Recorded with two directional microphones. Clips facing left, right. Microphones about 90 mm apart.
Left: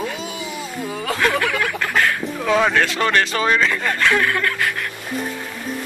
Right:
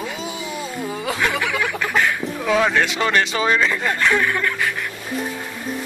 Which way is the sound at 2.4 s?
Centre (ahead or behind).